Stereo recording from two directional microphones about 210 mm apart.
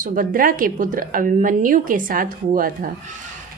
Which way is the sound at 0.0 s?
40° right (ahead or behind).